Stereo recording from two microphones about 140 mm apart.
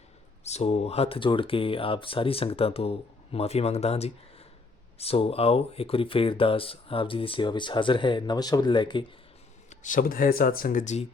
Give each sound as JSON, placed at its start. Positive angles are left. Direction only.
{"t": 0.4, "sound": "speech", "side_deg": 50}
{"t": 9.6, "sound": "speech", "side_deg": 65}